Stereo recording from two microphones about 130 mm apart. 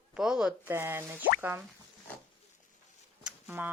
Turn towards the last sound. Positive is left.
turn(degrees=-10)  # may be behind; listen again after turning